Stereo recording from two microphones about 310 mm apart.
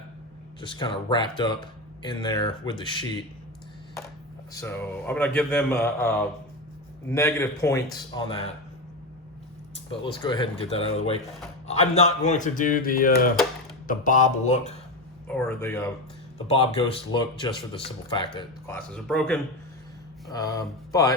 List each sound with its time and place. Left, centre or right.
0.6 s speech: centre
4.5 s speech: centre
9.9 s a man's voice: centre
15.3 s speech: centre